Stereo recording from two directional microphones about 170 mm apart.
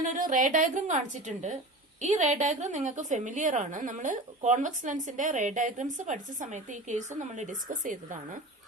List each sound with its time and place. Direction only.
0.0 s a woman's voice: 50° right (ahead or behind)